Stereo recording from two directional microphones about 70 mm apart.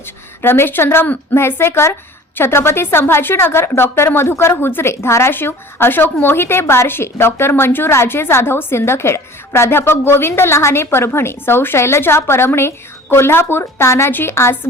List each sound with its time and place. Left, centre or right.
0.4 s a woman's voice: left